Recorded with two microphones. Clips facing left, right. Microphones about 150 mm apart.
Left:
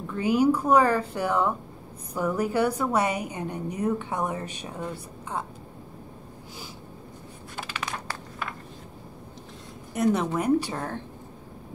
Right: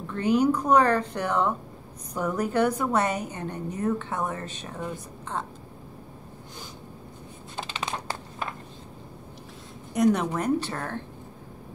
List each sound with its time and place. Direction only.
0.1 s a woman's voice: 10° left (ahead or behind)
7.5 s a sound: 25° right (ahead or behind)
9.9 s a woman's voice: 5° left (ahead or behind)